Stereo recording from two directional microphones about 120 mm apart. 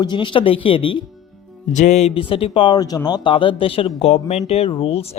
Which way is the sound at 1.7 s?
85° left.